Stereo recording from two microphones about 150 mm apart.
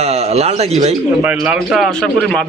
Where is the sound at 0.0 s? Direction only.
45° right (ahead or behind).